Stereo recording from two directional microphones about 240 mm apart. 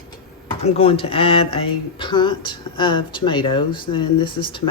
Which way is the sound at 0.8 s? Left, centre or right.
Left.